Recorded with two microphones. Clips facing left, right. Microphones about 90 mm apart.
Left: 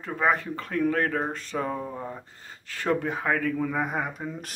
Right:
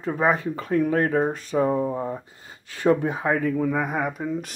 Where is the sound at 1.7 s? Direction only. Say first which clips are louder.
Right 8 dB; 25° right (ahead or behind).